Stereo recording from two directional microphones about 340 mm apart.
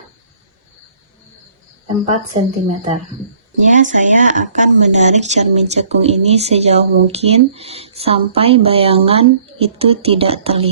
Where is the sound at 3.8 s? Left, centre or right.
Right.